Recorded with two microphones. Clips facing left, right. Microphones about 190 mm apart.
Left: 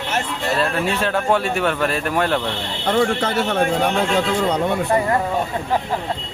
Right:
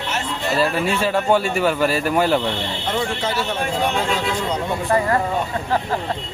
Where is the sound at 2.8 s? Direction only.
60° left (ahead or behind).